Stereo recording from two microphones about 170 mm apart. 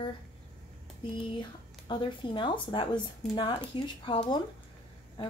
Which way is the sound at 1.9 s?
30° left (ahead or behind).